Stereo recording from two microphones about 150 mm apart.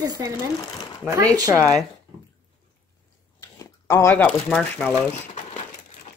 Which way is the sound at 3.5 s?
20° left (ahead or behind).